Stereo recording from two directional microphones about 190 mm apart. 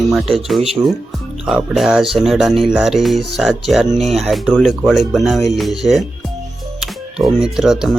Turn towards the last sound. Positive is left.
turn(degrees=-5)  # may be behind; listen again after turning